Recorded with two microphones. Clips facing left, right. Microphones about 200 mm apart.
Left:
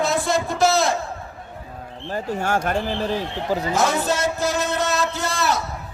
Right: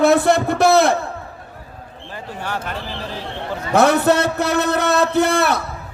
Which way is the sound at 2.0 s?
45° left (ahead or behind).